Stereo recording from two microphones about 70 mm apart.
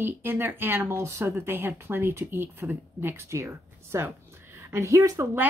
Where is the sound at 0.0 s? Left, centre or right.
Right.